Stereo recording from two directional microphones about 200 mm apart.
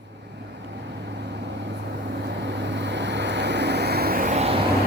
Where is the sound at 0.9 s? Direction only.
60° right (ahead or behind); by 4.5 s 35° right (ahead or behind).